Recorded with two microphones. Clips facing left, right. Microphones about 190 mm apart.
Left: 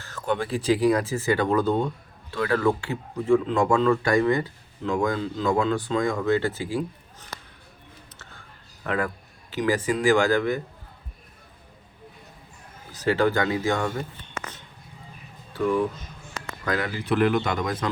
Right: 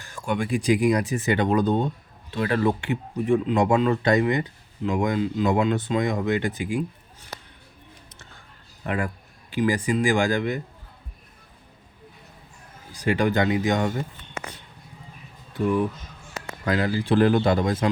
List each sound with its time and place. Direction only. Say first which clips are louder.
0.0 s speech: even; 10° right (ahead or behind)
8.8 s a man's voice: left 1 dB; 15° right (ahead or behind)
12.9 s speech: left 1 dB; 15° right (ahead or behind)
16.6 s speech: right 3 dB; 30° right (ahead or behind)